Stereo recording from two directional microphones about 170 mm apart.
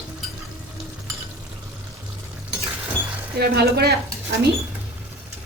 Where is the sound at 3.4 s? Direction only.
70° right (ahead or behind).